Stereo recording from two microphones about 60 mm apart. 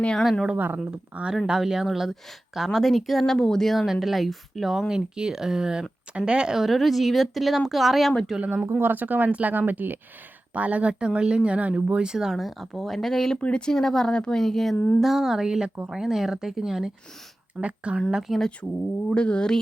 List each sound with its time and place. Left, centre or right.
0.0 s speech: centre
0.5 s speech: right
0.8 s speech: centre
8.4 s speech: right; by 16.9 s centre
17.6 s speech: right
18.1 s speech: centre
19.0 s speech: centre